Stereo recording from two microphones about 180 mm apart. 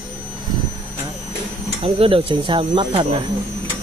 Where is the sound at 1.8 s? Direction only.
30° right (ahead or behind).